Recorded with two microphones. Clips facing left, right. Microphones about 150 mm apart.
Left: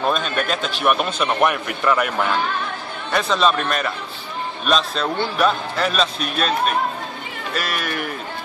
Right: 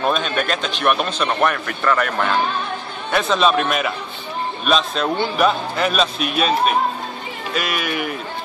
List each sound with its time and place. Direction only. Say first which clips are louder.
0.0 s a man's voice: right 1 dB; centre (ahead or behind)